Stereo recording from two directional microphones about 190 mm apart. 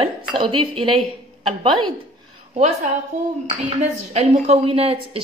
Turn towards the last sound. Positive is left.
turn(degrees=-30)  # may be behind; listen again after turning